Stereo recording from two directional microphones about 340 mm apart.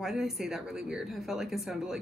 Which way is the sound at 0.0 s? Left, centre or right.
Centre.